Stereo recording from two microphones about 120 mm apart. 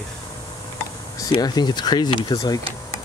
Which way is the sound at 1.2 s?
35° left (ahead or behind).